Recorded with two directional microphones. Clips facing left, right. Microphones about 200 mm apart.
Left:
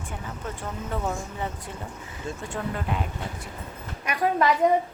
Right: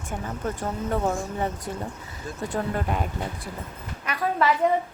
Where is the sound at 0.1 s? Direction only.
45° right (ahead or behind).